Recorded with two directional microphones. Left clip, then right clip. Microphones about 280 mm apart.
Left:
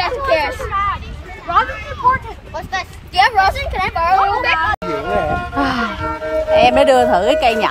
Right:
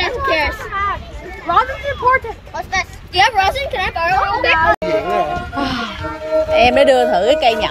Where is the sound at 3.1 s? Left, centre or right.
Left.